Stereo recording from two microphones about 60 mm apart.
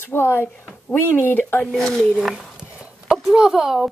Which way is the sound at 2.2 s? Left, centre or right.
Centre.